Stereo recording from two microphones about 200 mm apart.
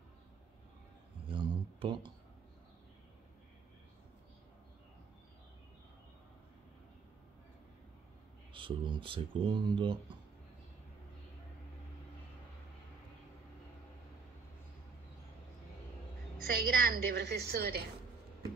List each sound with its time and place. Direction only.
1.2 s a sound: 25° right (ahead or behind)
8.5 s speech: 25° right (ahead or behind)
16.5 s a woman's voice: 45° right (ahead or behind)